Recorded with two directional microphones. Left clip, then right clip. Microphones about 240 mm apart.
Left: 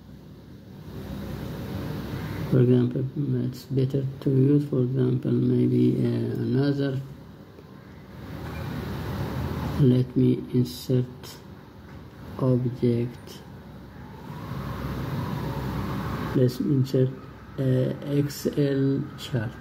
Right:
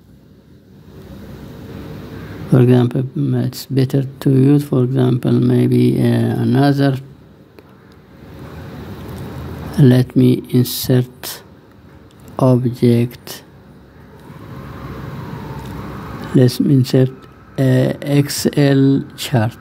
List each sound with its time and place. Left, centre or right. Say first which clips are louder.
2.5 s speech: right 9 dB; right
9.8 s speech: right 10 dB; right
12.4 s speech: right 11 dB; right
16.3 s speech: right 11 dB; right